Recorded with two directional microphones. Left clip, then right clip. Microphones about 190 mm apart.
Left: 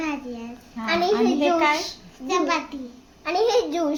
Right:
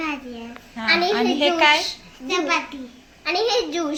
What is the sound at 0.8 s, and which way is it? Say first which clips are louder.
Speech: right 3 dB; 45° left (ahead or behind).